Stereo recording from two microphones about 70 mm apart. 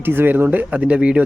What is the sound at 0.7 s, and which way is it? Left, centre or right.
Speech, centre.